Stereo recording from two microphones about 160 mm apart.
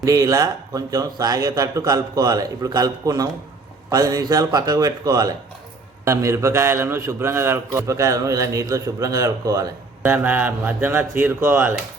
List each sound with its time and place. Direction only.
0.0 s a man's voice: 20° right (ahead or behind)